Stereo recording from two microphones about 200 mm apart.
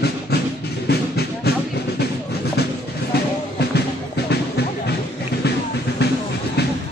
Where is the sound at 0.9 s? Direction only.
55° left (ahead or behind).